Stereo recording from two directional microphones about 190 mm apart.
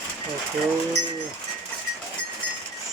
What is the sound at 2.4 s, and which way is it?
Livestock, 5° left (ahead or behind).